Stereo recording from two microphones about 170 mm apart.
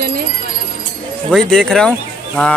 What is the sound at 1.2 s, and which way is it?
Speech, centre (ahead or behind).